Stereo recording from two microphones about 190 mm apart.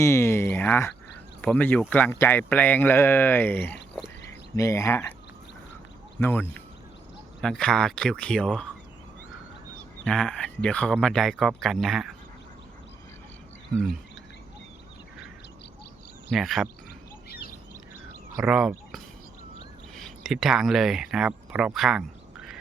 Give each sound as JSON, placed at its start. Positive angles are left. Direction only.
{"t": 0.0, "sound": "speech", "side_deg": 15}
{"t": 6.1, "sound": "speech", "side_deg": 10}
{"t": 10.0, "sound": "speech", "side_deg": 5}
{"t": 16.3, "sound": "speech", "side_deg": 0}
{"t": 17.2, "sound": "bird", "side_deg": 55}
{"t": 18.4, "sound": "speech", "side_deg": -5}